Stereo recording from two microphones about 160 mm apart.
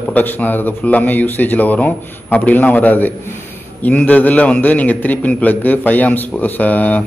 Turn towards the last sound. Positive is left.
turn(degrees=10)  # may be behind; listen again after turning